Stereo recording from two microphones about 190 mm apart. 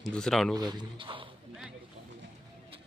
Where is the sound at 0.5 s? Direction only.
20° right (ahead or behind).